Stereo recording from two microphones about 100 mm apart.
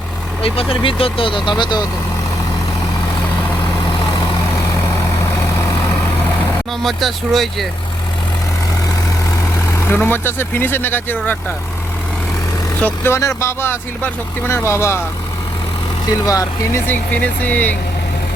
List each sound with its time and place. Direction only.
0.4 s speech: 70° left (ahead or behind); by 1.9 s 45° left (ahead or behind)
6.8 s speech: centre (ahead or behind)
9.7 s speech: 25° left (ahead or behind)
12.8 s speech: 25° left (ahead or behind)
16.0 s speech: 35° left (ahead or behind)
16.9 s speech: 15° left (ahead or behind)